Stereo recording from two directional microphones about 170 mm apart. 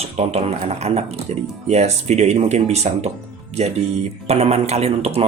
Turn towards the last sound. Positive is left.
turn(degrees=-40)  # may be behind; listen again after turning